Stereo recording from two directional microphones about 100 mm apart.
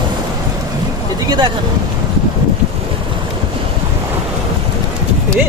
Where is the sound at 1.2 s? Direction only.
45° right (ahead or behind).